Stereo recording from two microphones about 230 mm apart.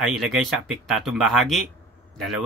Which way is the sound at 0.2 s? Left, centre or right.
Centre.